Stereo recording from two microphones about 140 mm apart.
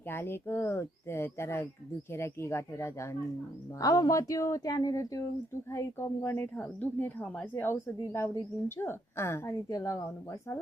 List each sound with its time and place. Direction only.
0.1 s a woman's voice: 15° left (ahead or behind)